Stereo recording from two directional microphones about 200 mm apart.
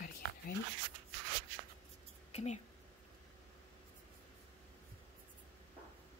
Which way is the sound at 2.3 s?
35° left (ahead or behind).